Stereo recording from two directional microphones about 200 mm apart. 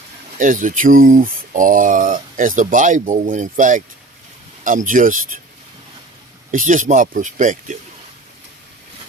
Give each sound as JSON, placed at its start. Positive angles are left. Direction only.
{"t": 0.3, "sound": "speech", "side_deg": -40}
{"t": 6.5, "sound": "speech", "side_deg": -40}